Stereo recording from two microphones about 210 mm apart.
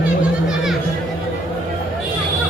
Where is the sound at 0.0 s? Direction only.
Centre (ahead or behind).